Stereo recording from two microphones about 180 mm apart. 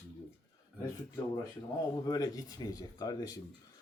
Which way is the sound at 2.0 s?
20° left (ahead or behind).